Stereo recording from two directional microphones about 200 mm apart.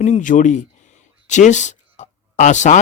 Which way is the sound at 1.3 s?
35° left (ahead or behind).